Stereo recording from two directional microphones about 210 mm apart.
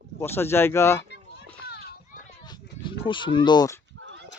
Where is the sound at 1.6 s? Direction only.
50° left (ahead or behind).